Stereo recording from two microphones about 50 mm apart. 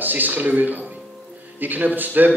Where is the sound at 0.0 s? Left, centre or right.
Right.